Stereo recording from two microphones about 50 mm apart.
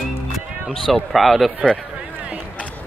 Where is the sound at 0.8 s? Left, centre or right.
Centre.